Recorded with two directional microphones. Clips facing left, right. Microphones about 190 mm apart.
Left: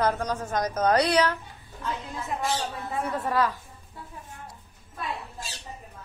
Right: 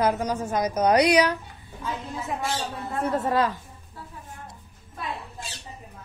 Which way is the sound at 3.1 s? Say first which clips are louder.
Right 2 dB; 25° right (ahead or behind).